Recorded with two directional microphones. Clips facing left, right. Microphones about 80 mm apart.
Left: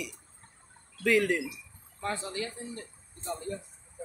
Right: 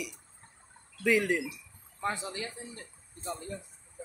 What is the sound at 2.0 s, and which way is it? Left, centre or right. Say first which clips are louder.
Speech: even; centre.